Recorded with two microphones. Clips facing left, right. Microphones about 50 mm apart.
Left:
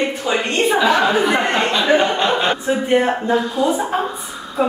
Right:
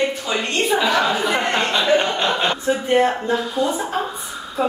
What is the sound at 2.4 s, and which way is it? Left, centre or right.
Speech, left.